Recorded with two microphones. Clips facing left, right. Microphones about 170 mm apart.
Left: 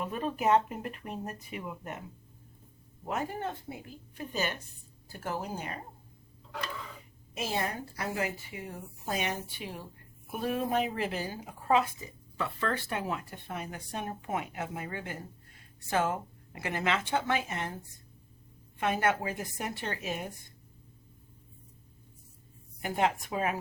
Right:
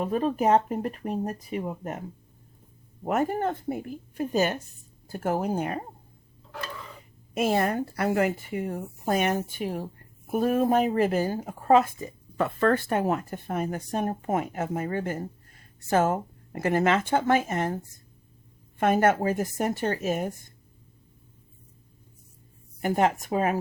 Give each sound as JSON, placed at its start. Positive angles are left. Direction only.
{"t": 0.0, "sound": "speech", "side_deg": -35}
{"t": 3.0, "sound": "speech", "side_deg": -50}
{"t": 7.3, "sound": "speech", "side_deg": -55}
{"t": 18.8, "sound": "speech", "side_deg": -45}
{"t": 22.8, "sound": "speech", "side_deg": -45}